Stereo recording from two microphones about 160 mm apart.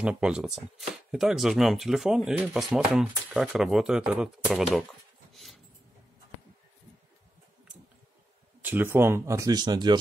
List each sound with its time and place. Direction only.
0.0 s speech: 5° right (ahead or behind)
5.3 s a sound: centre (ahead or behind)
8.6 s speech: 15° right (ahead or behind)